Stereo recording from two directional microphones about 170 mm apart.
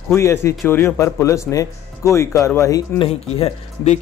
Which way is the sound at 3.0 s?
35° left (ahead or behind).